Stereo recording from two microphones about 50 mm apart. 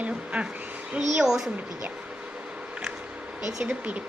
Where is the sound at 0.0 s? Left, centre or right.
Right.